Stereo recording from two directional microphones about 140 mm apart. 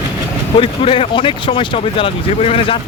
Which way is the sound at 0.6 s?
40° left (ahead or behind).